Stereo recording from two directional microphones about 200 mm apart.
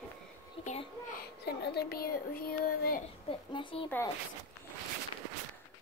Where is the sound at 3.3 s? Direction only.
25° left (ahead or behind).